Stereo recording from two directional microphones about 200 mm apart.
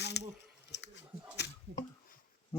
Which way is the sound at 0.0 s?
55° left (ahead or behind).